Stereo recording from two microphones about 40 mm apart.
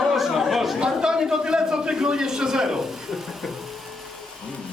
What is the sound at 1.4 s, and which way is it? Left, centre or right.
A man's voice, right.